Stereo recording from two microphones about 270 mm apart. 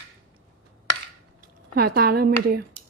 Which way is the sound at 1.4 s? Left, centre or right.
Right.